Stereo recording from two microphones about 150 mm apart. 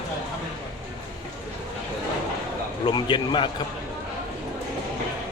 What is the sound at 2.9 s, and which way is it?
Speech, 30° left (ahead or behind).